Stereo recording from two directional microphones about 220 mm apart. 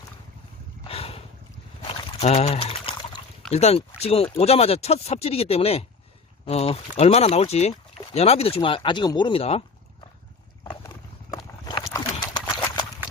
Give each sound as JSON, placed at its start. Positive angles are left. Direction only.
{"t": 0.9, "sound": "a sound", "side_deg": 25}
{"t": 3.5, "sound": "speech", "side_deg": 30}
{"t": 10.6, "sound": "horse", "side_deg": 15}